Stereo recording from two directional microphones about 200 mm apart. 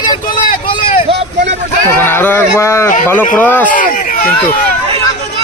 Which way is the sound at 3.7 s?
45° left (ahead or behind).